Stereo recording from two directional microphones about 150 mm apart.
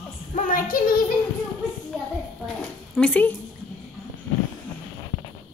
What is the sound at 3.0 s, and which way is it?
Speech, 10° left (ahead or behind).